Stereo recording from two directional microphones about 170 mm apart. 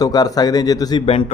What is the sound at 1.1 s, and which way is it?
Speech, 35° left (ahead or behind).